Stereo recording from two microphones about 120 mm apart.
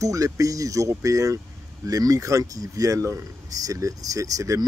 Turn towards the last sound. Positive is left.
turn(degrees=-30)  # may be behind; listen again after turning